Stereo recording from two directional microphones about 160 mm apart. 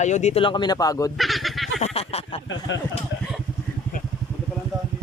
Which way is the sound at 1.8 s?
40° left (ahead or behind).